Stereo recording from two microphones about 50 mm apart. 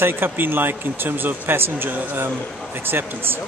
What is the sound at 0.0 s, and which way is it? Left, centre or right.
Speech, right.